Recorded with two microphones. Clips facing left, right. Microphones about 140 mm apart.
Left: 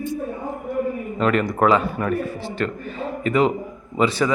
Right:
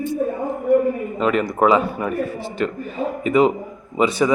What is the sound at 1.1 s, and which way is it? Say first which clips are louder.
A man's voice: left 3 dB; 5° right (ahead or behind).